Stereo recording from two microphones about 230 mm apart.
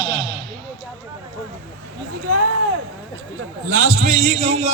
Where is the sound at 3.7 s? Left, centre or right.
Right.